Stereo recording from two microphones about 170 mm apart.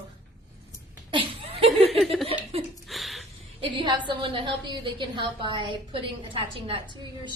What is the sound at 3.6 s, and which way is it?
A woman's voice, 30° right (ahead or behind).